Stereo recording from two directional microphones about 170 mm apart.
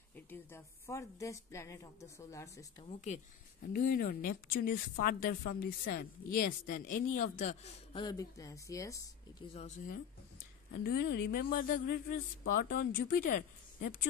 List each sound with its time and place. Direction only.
0.1 s a woman's voice: 10° left (ahead or behind)
2.8 s speech: 40° left (ahead or behind)
3.6 s speech: 60° left (ahead or behind)
7.9 s speech: 25° left (ahead or behind)
9.5 s speech: 35° left (ahead or behind)
10.8 s speech: 70° left (ahead or behind); by 13.9 s 55° left (ahead or behind)